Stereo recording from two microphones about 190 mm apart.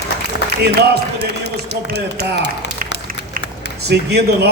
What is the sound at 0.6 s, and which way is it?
A man's voice, 60° right (ahead or behind).